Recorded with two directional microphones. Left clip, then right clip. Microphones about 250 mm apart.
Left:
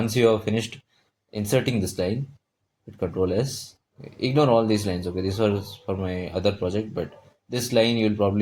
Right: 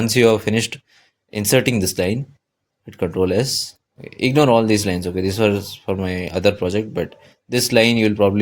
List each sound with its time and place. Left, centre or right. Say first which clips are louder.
0.0 s speech: right 6 dB; right
3.0 s speech: right 6 dB; right